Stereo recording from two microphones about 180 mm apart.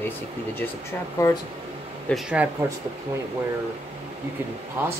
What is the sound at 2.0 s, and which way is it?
Speech, 5° right (ahead or behind).